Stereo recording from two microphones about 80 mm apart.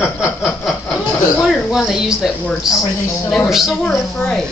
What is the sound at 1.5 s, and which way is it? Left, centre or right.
Speech, centre.